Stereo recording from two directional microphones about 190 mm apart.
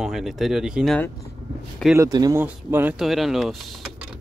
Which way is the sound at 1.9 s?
20° right (ahead or behind).